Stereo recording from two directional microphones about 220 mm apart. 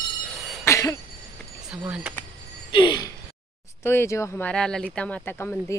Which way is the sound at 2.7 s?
20° left (ahead or behind).